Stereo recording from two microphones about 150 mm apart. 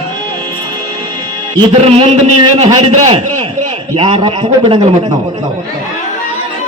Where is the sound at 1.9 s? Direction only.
45° right (ahead or behind).